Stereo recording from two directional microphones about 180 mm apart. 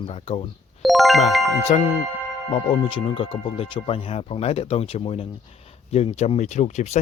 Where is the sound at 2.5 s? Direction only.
30° left (ahead or behind).